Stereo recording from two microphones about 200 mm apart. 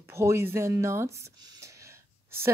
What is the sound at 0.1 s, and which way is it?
Speech, 15° right (ahead or behind).